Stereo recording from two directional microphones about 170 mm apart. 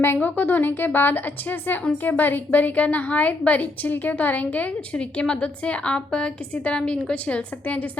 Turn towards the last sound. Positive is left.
turn(degrees=5)  # may be behind; listen again after turning